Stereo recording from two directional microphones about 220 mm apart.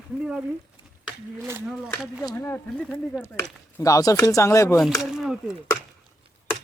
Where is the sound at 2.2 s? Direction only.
15° left (ahead or behind).